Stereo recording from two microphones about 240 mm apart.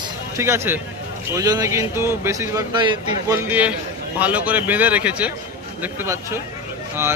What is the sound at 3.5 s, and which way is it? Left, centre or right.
Speech, centre.